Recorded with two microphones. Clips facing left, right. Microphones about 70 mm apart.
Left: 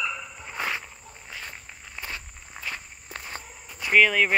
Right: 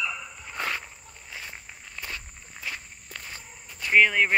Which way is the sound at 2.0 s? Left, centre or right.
Centre.